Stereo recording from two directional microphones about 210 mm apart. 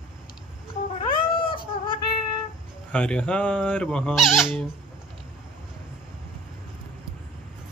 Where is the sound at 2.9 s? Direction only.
5° left (ahead or behind).